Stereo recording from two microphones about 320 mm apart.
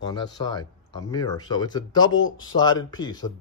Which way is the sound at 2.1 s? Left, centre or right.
Left.